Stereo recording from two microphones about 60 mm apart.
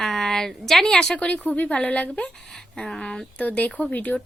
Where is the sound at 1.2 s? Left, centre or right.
Left.